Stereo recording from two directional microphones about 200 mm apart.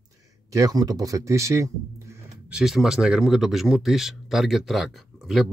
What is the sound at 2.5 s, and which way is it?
Speech, centre (ahead or behind).